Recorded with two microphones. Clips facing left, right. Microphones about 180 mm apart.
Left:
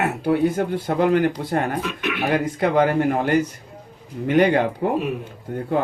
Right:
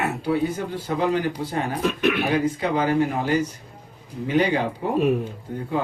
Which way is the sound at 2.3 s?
55° left (ahead or behind).